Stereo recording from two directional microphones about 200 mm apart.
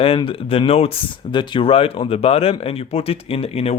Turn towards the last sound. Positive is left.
turn(degrees=30)  # may be behind; listen again after turning